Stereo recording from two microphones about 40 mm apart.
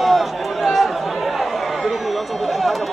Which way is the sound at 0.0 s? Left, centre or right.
Centre.